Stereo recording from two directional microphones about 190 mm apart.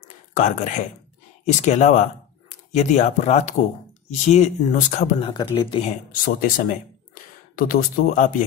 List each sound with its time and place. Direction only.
0.4 s speech: 40° left (ahead or behind)
5.3 s speech: 25° left (ahead or behind)
6.2 s speech: 45° left (ahead or behind)